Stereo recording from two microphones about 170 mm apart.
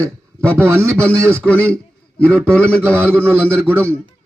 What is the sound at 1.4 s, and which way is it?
A man's voice, 10° left (ahead or behind).